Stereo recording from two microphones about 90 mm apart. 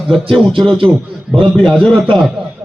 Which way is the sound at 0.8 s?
25° right (ahead or behind).